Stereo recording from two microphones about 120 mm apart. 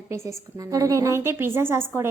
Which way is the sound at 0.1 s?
25° right (ahead or behind).